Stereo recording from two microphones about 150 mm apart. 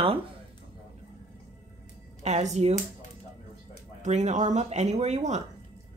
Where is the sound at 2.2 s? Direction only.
50° right (ahead or behind).